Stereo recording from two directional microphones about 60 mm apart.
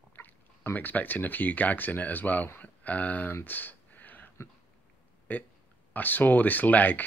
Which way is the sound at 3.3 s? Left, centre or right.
Left.